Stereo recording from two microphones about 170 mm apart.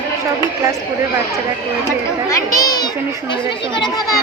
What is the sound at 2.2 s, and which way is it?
Children playing, 20° left (ahead or behind).